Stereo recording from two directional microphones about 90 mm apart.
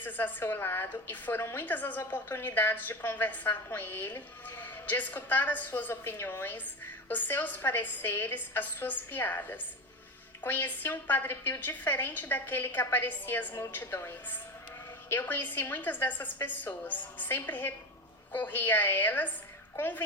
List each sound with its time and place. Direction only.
0.0 s a woman's voice: 20° left (ahead or behind)